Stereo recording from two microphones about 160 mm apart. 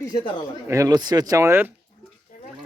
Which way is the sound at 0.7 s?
20° right (ahead or behind).